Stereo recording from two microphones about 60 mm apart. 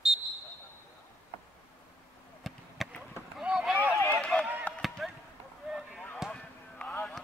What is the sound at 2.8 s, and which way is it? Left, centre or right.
Chop, centre.